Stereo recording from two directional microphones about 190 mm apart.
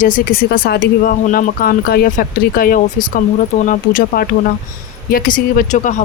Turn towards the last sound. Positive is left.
turn(degrees=40)  # may be behind; listen again after turning